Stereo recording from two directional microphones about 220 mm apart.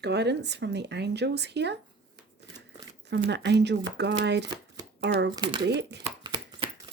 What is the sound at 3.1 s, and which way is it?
Speech, 50° right (ahead or behind).